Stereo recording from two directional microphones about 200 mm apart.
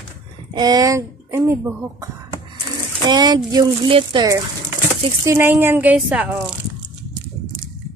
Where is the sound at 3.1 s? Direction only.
20° right (ahead or behind).